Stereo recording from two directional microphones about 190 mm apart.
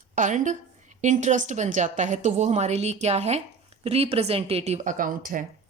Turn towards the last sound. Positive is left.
turn(degrees=-45)  # may be behind; listen again after turning